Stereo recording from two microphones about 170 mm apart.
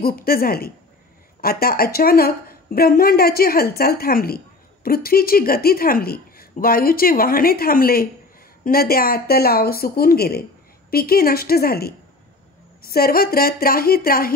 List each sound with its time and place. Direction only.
0.0 s speech: 60° left (ahead or behind)